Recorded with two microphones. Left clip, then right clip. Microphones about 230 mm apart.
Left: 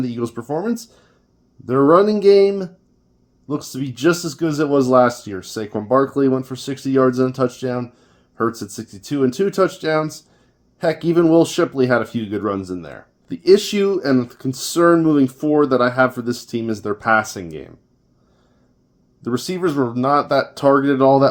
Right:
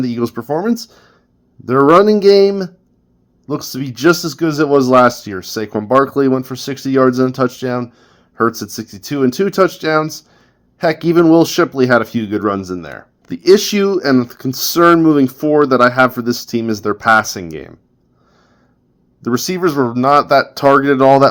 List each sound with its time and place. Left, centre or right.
0.0 s speech: right
19.2 s speech: right